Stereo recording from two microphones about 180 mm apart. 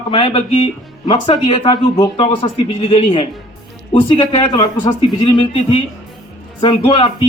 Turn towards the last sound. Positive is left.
turn(degrees=30)  # may be behind; listen again after turning